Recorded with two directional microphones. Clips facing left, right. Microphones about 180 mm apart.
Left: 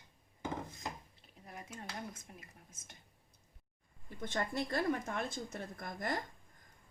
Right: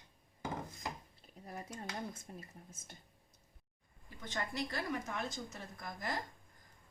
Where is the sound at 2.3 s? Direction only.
30° right (ahead or behind).